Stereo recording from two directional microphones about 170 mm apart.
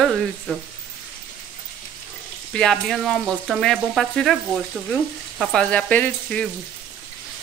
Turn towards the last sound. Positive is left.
turn(degrees=10)  # may be behind; listen again after turning